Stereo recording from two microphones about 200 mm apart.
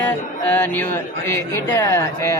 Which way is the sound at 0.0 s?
10° left (ahead or behind).